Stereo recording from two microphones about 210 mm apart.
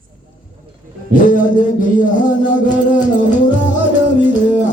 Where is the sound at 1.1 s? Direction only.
40° left (ahead or behind).